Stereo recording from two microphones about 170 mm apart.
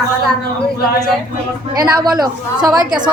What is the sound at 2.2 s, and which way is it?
Speech, 25° right (ahead or behind).